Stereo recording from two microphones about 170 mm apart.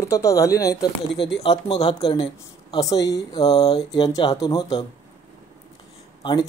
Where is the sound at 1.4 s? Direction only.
35° left (ahead or behind).